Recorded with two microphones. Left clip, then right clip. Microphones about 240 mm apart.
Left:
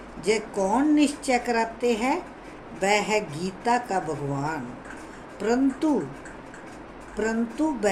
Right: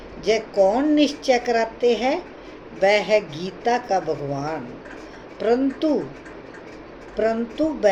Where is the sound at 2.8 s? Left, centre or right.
Centre.